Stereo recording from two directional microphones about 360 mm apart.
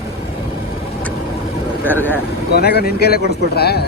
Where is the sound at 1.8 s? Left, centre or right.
Centre.